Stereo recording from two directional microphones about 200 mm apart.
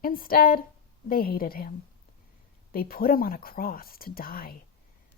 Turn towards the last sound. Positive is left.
turn(degrees=45)  # may be behind; listen again after turning